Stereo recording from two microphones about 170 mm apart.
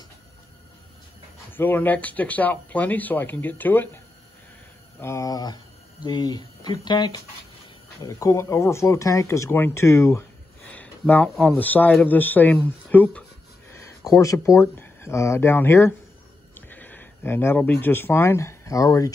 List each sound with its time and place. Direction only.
1.5 s speech: 10° left (ahead or behind)
5.0 s speech: 20° left (ahead or behind)
13.7 s a sound: 15° left (ahead or behind)
14.2 s speech: 20° left (ahead or behind)